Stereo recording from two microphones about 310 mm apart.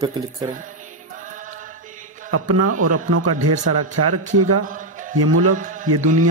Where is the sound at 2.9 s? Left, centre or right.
Right.